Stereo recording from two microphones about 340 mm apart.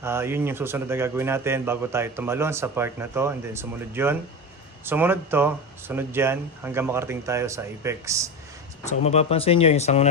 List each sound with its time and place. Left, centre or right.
0.0 s a man's voice: centre
8.8 s speech: centre